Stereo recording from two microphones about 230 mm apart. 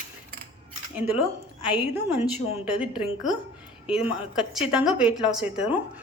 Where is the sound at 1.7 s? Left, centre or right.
Centre.